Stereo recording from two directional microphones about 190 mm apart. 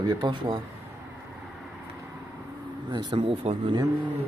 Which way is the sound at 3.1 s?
30° right (ahead or behind).